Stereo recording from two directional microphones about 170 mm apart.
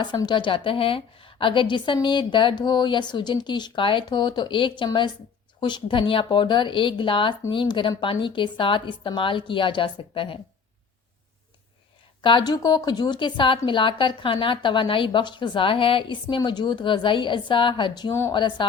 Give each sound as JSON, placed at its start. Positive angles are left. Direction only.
{"t": 0.0, "sound": "a woman's voice", "side_deg": 25}
{"t": 12.2, "sound": "a woman's voice", "side_deg": 25}